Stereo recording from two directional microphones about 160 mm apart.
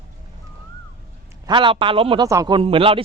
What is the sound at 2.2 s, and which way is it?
Speech, 20° right (ahead or behind).